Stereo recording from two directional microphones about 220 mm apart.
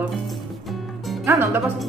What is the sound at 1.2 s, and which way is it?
Speech, 10° right (ahead or behind).